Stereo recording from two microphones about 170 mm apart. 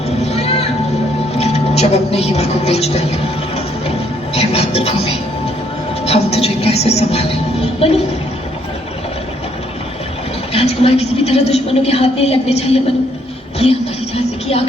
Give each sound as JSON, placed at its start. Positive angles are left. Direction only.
{"t": 0.2, "sound": "a sound", "side_deg": 40}
{"t": 1.4, "sound": "speech", "side_deg": 40}
{"t": 4.4, "sound": "television", "side_deg": 35}
{"t": 6.1, "sound": "speech", "side_deg": 35}
{"t": 10.5, "sound": "a woman's voice", "side_deg": 35}
{"t": 14.4, "sound": "speech", "side_deg": 35}